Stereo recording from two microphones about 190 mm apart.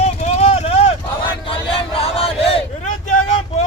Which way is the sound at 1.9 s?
30° left (ahead or behind).